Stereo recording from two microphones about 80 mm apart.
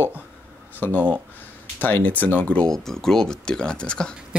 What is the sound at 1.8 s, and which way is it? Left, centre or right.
Speech, left.